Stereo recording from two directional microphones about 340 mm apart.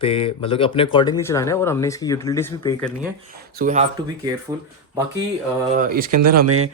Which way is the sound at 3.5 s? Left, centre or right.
Right.